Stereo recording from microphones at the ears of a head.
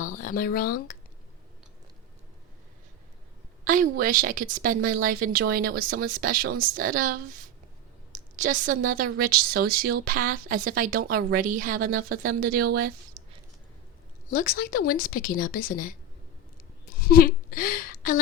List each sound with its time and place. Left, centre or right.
0.0 s speech: left
3.6 s a woman's voice: right
14.3 s a woman's voice: left